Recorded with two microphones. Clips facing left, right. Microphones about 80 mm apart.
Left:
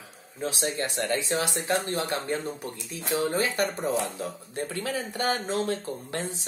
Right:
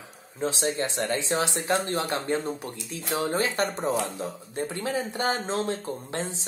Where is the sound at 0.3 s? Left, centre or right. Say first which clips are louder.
Right 3 dB; right.